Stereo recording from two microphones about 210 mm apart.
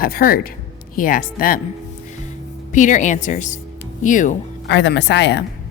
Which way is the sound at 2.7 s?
35° left (ahead or behind).